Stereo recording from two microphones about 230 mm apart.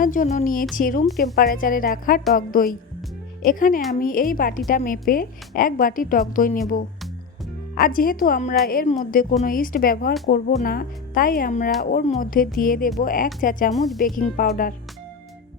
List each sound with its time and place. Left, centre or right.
0.0 s a woman's voice: left
1.0 s a woman's voice: centre
1.4 s a woman's voice: left
7.8 s a woman's voice: left
13.7 s a woman's voice: centre
14.0 s a woman's voice: left